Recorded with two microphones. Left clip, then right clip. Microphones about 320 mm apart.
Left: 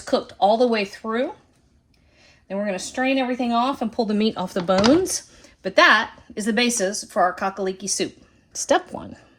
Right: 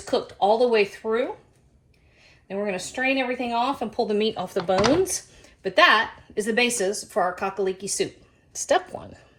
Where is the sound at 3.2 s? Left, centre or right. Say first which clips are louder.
Left 3 dB; left.